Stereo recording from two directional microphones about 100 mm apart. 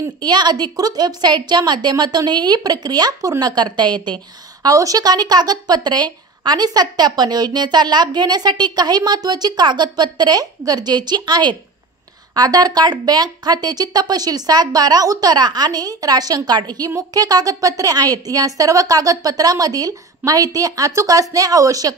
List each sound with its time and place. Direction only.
0.2 s speech: 45° right (ahead or behind)
4.6 s a woman's voice: 35° right (ahead or behind)